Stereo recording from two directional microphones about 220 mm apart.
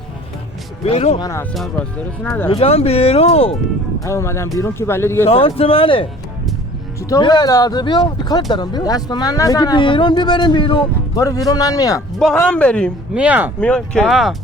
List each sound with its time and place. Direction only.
0.9 s speech: 25° left (ahead or behind)
1.5 s speech: centre (ahead or behind)
2.5 s speech: 25° left (ahead or behind)
4.0 s a man's voice: 10° left (ahead or behind)
5.3 s a man's voice: 25° left (ahead or behind)
12.2 s speech: 5° left (ahead or behind)
13.1 s speech: 5° right (ahead or behind)
13.6 s speech: 5° left (ahead or behind)